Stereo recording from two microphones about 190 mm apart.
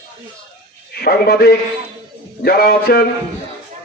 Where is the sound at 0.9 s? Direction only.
55° left (ahead or behind).